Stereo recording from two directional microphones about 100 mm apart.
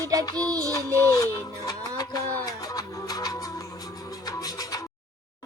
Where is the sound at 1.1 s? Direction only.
40° left (ahead or behind).